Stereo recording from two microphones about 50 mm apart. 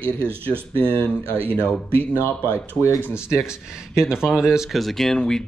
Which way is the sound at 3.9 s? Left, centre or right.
Centre.